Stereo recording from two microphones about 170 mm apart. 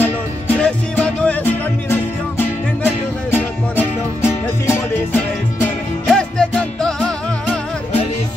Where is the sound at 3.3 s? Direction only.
15° left (ahead or behind).